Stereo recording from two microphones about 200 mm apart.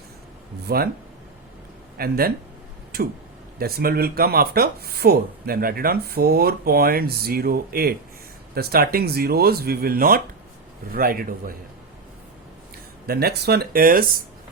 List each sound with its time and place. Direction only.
0.7 s speech: 50° right (ahead or behind)
2.0 s speech: 50° right (ahead or behind)
13.1 s speech: 50° right (ahead or behind)